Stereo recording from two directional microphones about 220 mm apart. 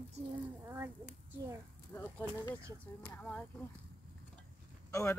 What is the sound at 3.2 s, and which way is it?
Speech, 5° left (ahead or behind).